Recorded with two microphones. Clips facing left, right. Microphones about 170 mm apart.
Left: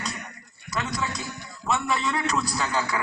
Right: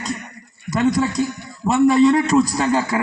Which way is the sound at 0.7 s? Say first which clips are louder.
Right 12 dB; 45° right (ahead or behind).